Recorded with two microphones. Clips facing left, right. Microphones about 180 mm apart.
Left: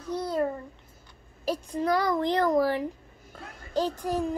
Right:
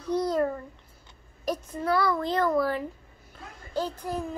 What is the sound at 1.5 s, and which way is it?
A child's voice, 15° left (ahead or behind).